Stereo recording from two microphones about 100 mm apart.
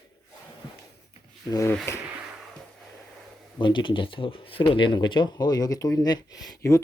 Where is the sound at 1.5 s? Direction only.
35° left (ahead or behind).